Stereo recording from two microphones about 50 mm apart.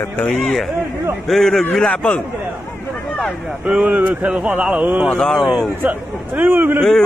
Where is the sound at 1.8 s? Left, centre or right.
Left.